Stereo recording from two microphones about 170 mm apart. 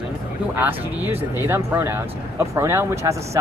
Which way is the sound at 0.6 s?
10° right (ahead or behind).